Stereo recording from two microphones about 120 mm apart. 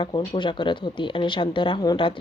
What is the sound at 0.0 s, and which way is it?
A woman's voice, 40° left (ahead or behind).